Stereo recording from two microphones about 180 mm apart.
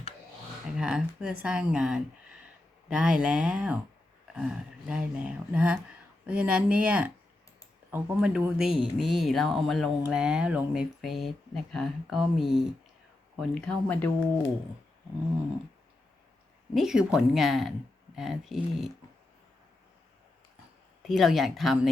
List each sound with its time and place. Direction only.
0.8 s speech: 5° right (ahead or behind)
16.7 s speech: 5° right (ahead or behind)
21.1 s speech: centre (ahead or behind)